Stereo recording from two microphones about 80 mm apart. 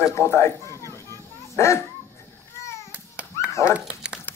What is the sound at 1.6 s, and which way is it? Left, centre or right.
Speech, left.